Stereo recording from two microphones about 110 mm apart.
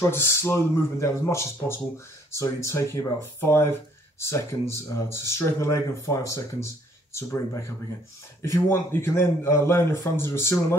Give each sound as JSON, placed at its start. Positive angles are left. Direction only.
{"t": 0.1, "sound": "speech", "side_deg": 20}